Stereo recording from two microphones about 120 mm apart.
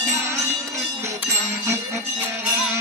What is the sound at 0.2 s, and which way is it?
Music, 25° right (ahead or behind).